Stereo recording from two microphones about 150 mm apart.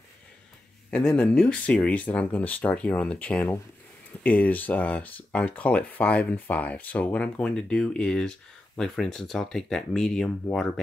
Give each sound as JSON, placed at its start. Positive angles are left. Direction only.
{"t": 0.8, "sound": "speech", "side_deg": 5}